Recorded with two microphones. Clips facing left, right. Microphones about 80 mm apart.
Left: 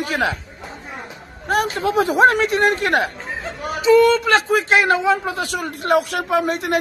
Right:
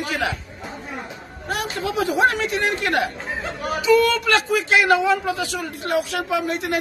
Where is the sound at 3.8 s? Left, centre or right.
Left.